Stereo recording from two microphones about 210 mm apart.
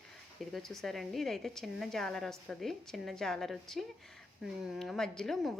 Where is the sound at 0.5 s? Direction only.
Centre (ahead or behind).